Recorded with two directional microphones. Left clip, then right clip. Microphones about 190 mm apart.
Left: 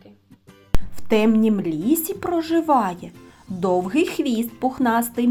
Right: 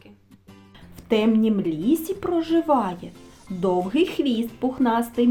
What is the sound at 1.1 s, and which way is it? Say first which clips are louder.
A woman's voice: left 2 dB; 25° left (ahead or behind).